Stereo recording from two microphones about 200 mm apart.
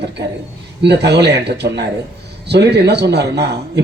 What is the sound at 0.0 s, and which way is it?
Speech, 55° right (ahead or behind).